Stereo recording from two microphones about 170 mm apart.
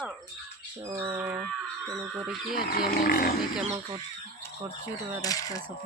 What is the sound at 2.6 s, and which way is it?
Speech, 60° left (ahead or behind).